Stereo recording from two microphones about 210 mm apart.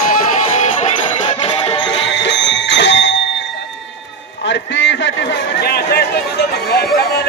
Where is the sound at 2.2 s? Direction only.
60° left (ahead or behind).